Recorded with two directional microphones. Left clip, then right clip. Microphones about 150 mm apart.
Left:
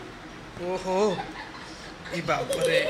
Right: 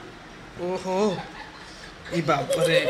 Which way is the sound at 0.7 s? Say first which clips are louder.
Even; 20° right (ahead or behind).